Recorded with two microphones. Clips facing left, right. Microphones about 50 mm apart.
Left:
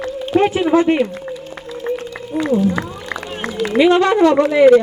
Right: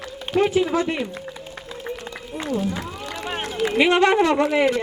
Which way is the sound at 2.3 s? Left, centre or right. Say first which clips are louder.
Left 11 dB; left.